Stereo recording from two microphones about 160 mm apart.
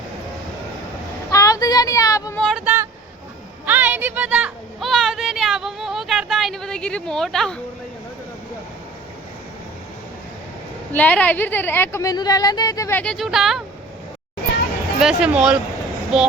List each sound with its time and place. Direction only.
1.3 s a sound: 20° left (ahead or behind)
2.4 s speech: centre (ahead or behind)
3.7 s a sound: 10° right (ahead or behind)
10.9 s speech: 10° left (ahead or behind)
13.0 s speech: 5° left (ahead or behind)
15.0 s speech: 5° right (ahead or behind)